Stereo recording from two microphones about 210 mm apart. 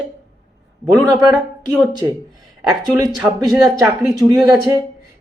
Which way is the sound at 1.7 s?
5° right (ahead or behind).